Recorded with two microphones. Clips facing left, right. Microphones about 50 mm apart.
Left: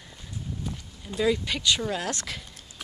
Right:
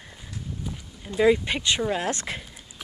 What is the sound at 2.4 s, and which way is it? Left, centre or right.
Whispering, centre.